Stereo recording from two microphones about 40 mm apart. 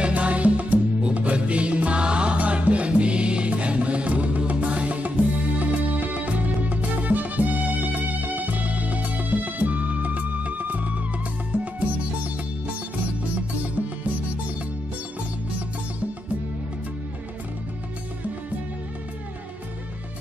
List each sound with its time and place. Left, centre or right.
0.1 s music: right
11.5 s music: right